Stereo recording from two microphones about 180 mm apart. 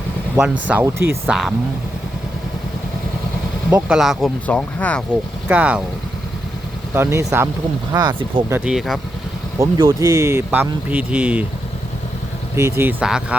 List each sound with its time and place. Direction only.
0.7 s speech: 10° right (ahead or behind)
1.3 s speech: centre (ahead or behind)
3.8 s speech: centre (ahead or behind)
5.5 s speech: 5° right (ahead or behind)
6.9 s speech: 15° right (ahead or behind)
8.5 s speech: 5° right (ahead or behind)
9.6 s speech: 15° right (ahead or behind)
12.5 s speech: 15° right (ahead or behind)